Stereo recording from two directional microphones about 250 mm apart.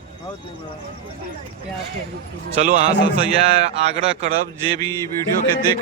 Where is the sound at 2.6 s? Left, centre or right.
Right.